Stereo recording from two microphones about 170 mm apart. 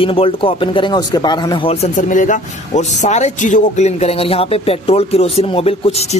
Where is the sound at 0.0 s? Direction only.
35° left (ahead or behind).